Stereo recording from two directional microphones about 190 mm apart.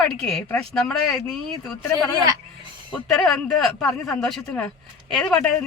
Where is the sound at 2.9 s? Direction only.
5° left (ahead or behind).